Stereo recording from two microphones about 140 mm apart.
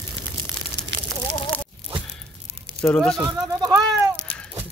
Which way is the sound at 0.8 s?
15° right (ahead or behind).